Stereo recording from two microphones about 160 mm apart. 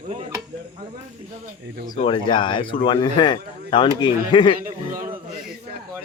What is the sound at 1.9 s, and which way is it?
A man's voice, 30° left (ahead or behind).